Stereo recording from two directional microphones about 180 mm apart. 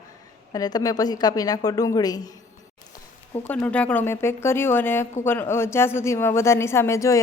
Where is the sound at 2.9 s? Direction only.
10° left (ahead or behind).